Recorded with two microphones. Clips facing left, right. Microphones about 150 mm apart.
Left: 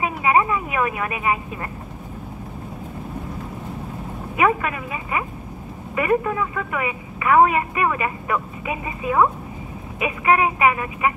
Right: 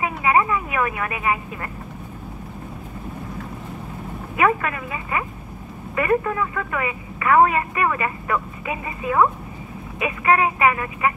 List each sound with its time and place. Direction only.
0.0 s speech: 20° left (ahead or behind)
4.4 s a woman's voice: 15° left (ahead or behind)